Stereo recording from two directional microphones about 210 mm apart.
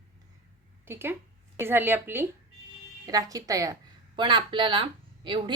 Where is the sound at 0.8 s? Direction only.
10° right (ahead or behind).